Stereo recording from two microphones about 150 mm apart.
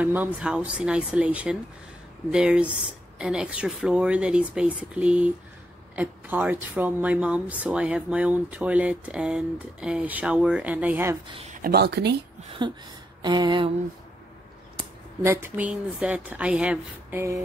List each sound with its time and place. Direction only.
0.0 s speech: 10° right (ahead or behind)
11.5 s speech: 80° right
12.6 s a sound: 30° right (ahead or behind)
15.2 s speech: 15° right (ahead or behind)